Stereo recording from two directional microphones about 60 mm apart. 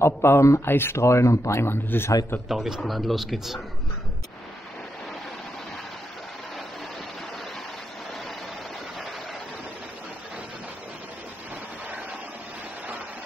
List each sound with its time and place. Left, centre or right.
0.0 s speech: left
1.0 s speech: left
2.4 s a man's voice: centre